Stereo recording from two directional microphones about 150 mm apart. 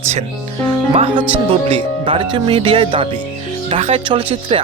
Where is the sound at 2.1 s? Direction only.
35° right (ahead or behind).